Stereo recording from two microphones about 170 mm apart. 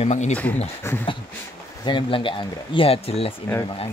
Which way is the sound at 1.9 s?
30° left (ahead or behind).